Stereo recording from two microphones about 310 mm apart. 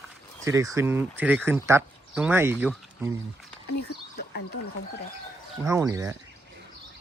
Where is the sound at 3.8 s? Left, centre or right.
Left.